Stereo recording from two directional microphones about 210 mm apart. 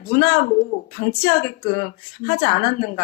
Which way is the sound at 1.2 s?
40° left (ahead or behind).